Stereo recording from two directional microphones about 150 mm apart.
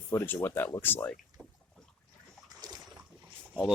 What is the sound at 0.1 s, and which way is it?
Speech, 15° left (ahead or behind).